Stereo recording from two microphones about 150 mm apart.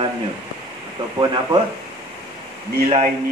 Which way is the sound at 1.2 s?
30° right (ahead or behind).